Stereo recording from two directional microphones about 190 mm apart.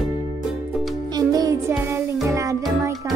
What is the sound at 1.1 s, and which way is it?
Music, 20° right (ahead or behind).